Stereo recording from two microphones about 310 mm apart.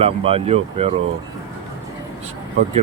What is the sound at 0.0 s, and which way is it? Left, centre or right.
Speech, centre.